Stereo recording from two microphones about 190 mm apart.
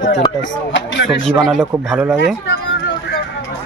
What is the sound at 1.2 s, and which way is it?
Speech, centre (ahead or behind).